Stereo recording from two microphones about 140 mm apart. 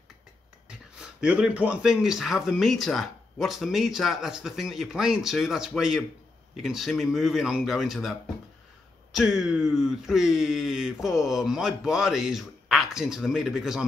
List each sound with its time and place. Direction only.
0.7 s speech: 5° right (ahead or behind)